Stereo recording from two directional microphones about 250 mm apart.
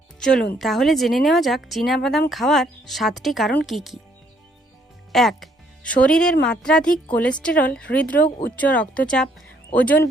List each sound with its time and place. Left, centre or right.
0.2 s speech: centre
5.1 s speech: centre